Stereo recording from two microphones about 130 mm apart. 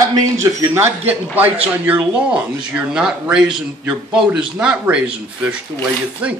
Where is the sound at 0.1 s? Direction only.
20° right (ahead or behind).